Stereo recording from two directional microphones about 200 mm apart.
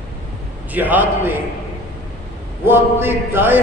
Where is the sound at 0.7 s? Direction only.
10° right (ahead or behind).